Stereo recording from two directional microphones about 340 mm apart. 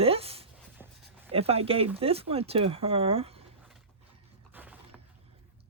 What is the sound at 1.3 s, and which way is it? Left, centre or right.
Speech, centre.